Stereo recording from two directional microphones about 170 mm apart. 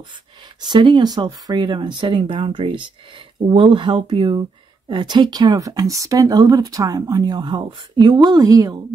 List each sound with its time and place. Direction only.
0.6 s speech: 25° right (ahead or behind)